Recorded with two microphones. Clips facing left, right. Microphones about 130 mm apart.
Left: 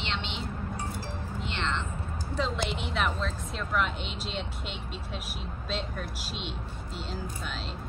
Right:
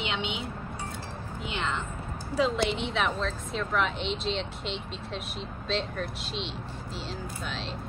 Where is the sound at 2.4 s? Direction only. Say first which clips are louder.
Right 5 dB; centre (ahead or behind).